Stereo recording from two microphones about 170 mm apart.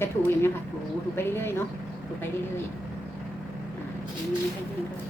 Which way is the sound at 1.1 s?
15° left (ahead or behind).